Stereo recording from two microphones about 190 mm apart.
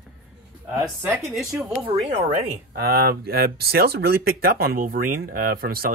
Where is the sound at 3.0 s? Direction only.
55° right (ahead or behind).